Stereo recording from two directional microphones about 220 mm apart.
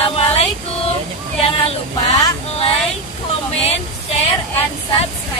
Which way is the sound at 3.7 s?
30° left (ahead or behind).